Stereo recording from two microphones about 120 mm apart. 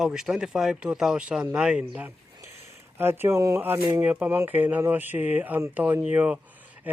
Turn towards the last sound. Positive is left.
turn(degrees=-10)  # may be behind; listen again after turning